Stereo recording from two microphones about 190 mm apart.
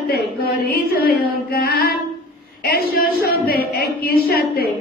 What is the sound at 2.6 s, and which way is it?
A woman's voice, 55° left (ahead or behind).